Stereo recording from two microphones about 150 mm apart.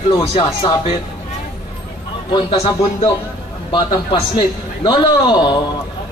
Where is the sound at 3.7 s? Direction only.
30° left (ahead or behind).